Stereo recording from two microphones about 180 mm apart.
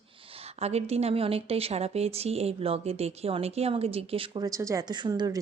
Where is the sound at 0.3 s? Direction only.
35° right (ahead or behind).